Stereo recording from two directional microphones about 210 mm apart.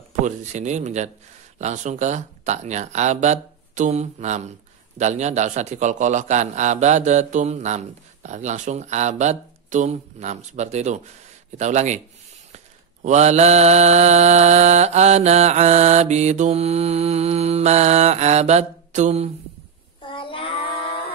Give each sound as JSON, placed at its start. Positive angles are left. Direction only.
{"t": 0.2, "sound": "speech", "side_deg": -35}
{"t": 20.1, "sound": "child singing", "side_deg": 25}